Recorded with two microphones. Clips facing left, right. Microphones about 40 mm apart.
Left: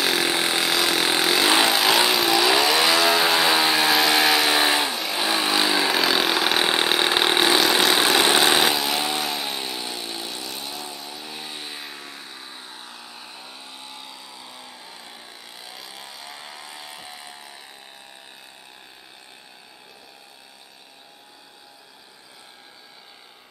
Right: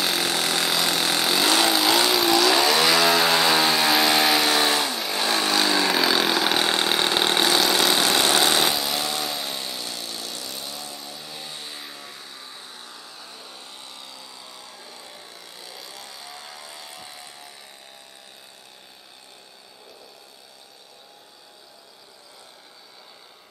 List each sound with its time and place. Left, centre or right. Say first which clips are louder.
0.0 s chainsaw: left 2 dB; centre
0.3 s chainsaw: left 2 dB; centre
0.7 s a sound: left 2 dB; centre
1.2 s vehicle: left 1 dB; centre
4.5 s vehicle: left 1 dB; centre
4.9 s vehicle: left 1 dB; centre
5.2 s vehicle: even; centre
5.9 s vehicle: even; centre
6.6 s vehicle: left 1 dB; centre
11.0 s music: left 2 dB; centre
11.8 s vehicle: left 2 dB; centre